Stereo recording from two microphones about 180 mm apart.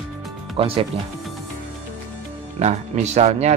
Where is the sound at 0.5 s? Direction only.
30° right (ahead or behind).